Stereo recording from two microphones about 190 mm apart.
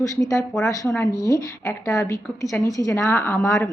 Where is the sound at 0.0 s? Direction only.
15° left (ahead or behind).